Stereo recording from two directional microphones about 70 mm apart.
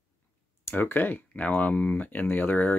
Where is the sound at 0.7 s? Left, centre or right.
Left.